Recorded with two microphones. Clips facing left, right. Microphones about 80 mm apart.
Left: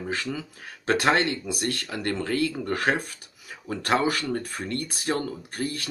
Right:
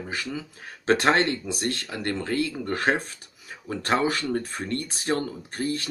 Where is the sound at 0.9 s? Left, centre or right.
Right.